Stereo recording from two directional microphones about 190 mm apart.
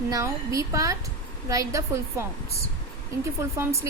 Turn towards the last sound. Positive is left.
turn(degrees=-15)  # may be behind; listen again after turning